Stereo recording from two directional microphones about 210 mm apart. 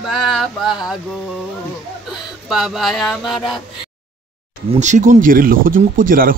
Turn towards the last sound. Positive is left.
turn(degrees=-40)  # may be behind; listen again after turning